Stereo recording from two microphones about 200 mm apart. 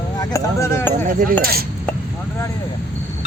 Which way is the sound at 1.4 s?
50° right (ahead or behind).